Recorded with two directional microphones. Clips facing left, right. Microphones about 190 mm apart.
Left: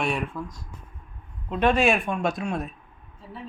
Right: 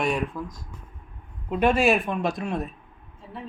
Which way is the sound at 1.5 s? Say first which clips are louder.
Right 1 dB; 10° right (ahead or behind).